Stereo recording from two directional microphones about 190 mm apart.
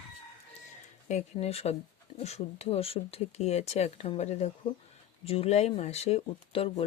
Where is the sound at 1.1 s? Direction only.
35° left (ahead or behind).